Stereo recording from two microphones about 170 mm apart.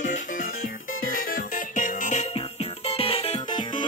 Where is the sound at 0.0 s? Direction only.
50° left (ahead or behind).